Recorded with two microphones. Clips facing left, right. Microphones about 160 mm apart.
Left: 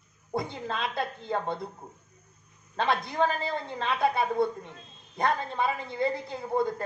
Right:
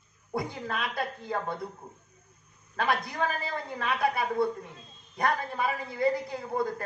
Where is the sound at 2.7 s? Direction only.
25° left (ahead or behind).